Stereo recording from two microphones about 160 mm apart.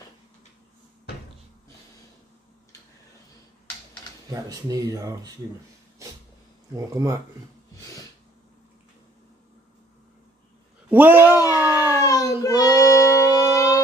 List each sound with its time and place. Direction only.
4.3 s speech: 20° right (ahead or behind)
6.7 s speech: 20° right (ahead or behind)
10.9 s a sound: 10° right (ahead or behind)
11.5 s child singing: 20° left (ahead or behind)